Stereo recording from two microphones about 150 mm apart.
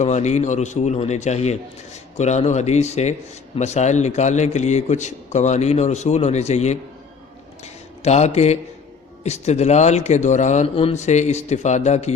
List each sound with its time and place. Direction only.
0.0 s a man's voice: 50° left (ahead or behind)
7.6 s a sound: 45° left (ahead or behind)
9.2 s a man's voice: 45° left (ahead or behind)